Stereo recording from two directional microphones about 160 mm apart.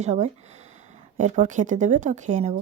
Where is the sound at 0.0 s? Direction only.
45° right (ahead or behind).